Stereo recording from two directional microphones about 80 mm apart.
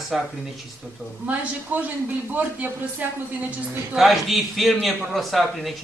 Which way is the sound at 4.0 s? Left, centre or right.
Centre.